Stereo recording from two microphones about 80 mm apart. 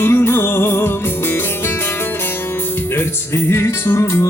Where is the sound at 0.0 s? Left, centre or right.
Left.